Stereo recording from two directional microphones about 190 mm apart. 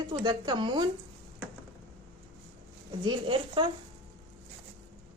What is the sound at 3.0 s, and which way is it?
Speech, 25° right (ahead or behind).